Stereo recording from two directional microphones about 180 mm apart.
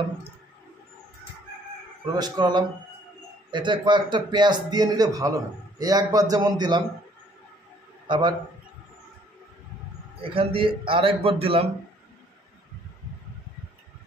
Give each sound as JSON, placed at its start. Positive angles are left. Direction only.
{"t": 2.1, "sound": "a man's voice", "side_deg": -20}
{"t": 8.1, "sound": "a man's voice", "side_deg": -25}
{"t": 10.2, "sound": "a man's voice", "side_deg": -30}